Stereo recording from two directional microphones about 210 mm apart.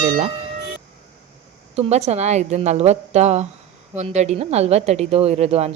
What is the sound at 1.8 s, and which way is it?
A woman's voice, 30° right (ahead or behind).